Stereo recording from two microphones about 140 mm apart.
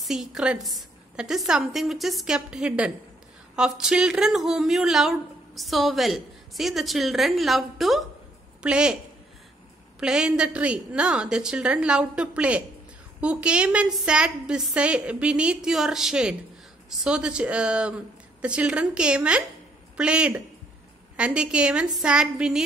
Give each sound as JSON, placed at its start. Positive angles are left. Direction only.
{"t": 0.0, "sound": "speech", "side_deg": -5}
{"t": 9.9, "sound": "a woman's voice", "side_deg": -5}